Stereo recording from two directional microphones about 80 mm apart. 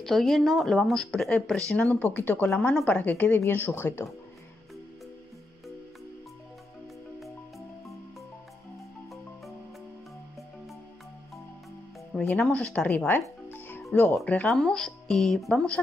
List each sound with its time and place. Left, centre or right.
0.0 s speech: centre; by 2.7 s left
2.7 s speech: centre
3.0 s speech: left
12.1 s speech: centre
13.5 s music: left
13.9 s speech: centre